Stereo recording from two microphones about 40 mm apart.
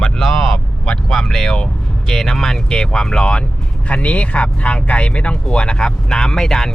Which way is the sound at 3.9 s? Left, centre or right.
Left.